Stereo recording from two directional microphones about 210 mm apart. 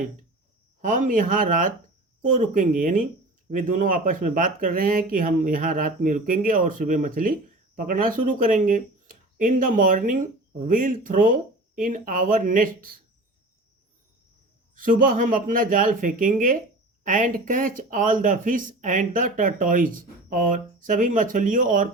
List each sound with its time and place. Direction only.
0.8 s speech: 40° right (ahead or behind)
14.8 s speech: 40° right (ahead or behind)